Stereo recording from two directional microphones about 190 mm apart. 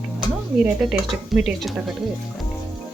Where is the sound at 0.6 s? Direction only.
5° right (ahead or behind).